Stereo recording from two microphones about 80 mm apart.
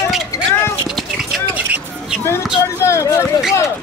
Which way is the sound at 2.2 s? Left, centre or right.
Left.